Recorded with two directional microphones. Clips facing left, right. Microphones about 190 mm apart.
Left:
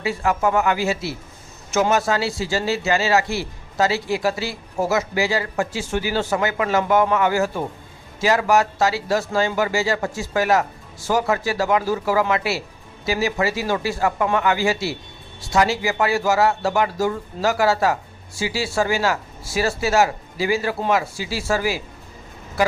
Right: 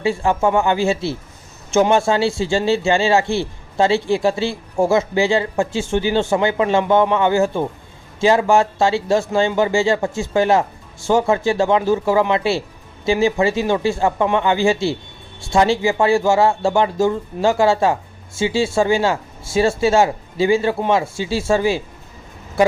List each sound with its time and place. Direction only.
0.0 s speech: 30° right (ahead or behind)